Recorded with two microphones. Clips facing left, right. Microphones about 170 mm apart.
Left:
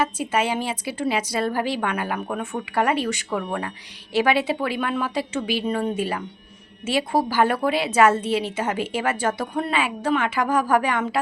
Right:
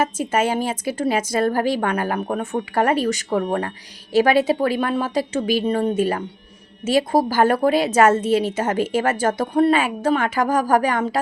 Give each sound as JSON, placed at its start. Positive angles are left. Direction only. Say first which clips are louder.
{"t": 0.0, "sound": "a woman's voice", "louder": "right 3 dB", "side_deg": -45}